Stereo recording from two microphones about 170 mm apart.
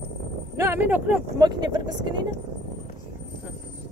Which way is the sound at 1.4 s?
25° right (ahead or behind).